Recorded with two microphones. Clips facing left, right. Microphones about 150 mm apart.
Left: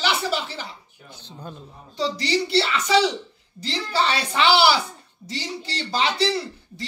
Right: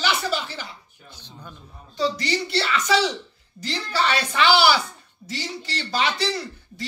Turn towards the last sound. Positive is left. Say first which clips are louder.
# left 2 dB
turn(degrees=30)  # may be behind; listen again after turning